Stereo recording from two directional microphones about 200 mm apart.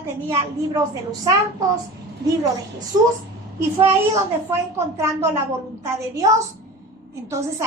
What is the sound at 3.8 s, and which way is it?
A child's voice, 15° right (ahead or behind).